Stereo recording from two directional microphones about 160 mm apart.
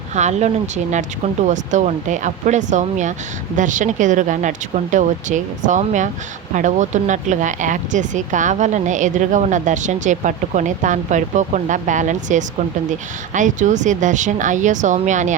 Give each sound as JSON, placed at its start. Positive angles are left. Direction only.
{"t": 0.1, "sound": "speech", "side_deg": -45}